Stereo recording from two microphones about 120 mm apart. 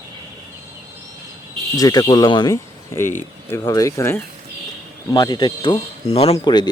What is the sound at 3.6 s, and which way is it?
Speech, 30° left (ahead or behind).